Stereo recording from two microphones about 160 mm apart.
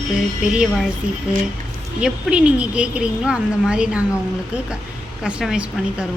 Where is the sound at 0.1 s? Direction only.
5° right (ahead or behind).